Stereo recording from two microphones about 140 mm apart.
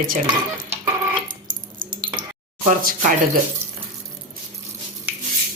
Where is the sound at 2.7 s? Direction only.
75° right (ahead or behind).